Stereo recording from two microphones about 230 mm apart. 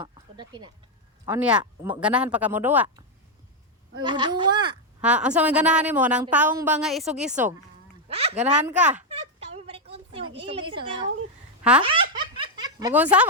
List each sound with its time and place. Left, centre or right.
0.3 s speech: centre
1.2 s speech: centre
4.0 s speech: centre
4.9 s a woman's voice: centre
8.1 s a child's voice: right
9.0 s a sound: right
11.8 s laughter: right
12.9 s speech: centre